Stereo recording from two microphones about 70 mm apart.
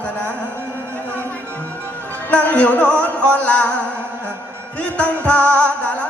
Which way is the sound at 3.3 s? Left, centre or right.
Centre.